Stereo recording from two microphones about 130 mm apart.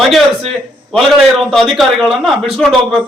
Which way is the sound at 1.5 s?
Centre (ahead or behind).